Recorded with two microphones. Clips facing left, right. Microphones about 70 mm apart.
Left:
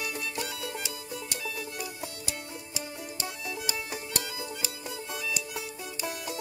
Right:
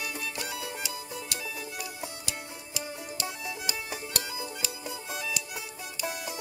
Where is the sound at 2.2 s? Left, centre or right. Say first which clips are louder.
Left 1 dB; left.